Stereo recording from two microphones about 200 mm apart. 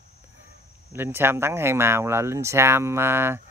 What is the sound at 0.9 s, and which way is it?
Speech, 10° right (ahead or behind).